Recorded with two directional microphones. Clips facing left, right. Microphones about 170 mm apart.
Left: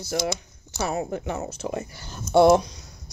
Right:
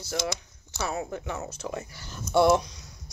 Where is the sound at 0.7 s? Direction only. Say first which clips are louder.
Left 4 dB; 40° left (ahead or behind).